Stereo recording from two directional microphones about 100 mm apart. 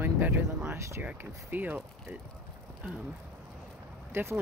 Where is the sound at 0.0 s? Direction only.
20° right (ahead or behind).